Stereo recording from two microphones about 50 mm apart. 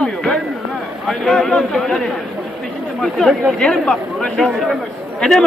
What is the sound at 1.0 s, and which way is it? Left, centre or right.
A man's voice, centre.